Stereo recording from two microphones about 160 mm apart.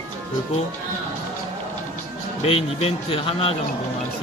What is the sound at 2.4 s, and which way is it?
Speech, 35° left (ahead or behind).